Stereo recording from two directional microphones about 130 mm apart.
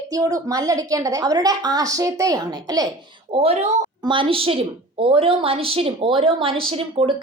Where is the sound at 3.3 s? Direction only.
50° right (ahead or behind).